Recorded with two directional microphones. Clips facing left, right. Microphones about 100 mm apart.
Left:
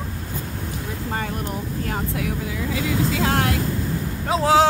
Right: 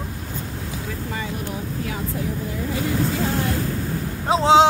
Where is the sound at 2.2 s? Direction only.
90° left.